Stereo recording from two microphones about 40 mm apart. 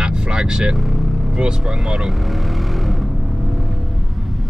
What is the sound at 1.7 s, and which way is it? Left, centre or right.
Vehicle, centre.